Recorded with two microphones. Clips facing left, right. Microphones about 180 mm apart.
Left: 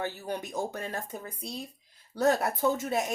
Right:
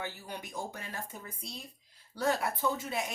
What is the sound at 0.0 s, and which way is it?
Speech, 45° left (ahead or behind).